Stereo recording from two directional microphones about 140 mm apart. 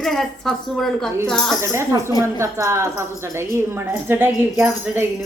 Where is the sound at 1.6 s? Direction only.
20° right (ahead or behind).